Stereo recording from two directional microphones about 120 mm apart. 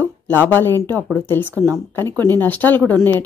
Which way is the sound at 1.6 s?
30° right (ahead or behind).